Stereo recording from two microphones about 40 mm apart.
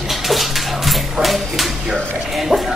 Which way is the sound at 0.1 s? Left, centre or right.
Centre.